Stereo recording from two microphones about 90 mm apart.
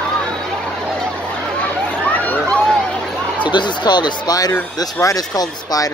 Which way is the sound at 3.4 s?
60° left (ahead or behind).